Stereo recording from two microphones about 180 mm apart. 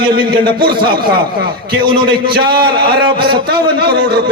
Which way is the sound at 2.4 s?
60° right (ahead or behind).